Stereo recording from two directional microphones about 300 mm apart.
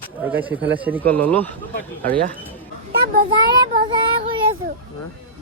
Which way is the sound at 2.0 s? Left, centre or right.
Right.